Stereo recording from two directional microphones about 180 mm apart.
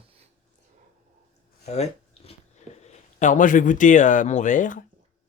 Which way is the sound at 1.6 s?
40° left (ahead or behind).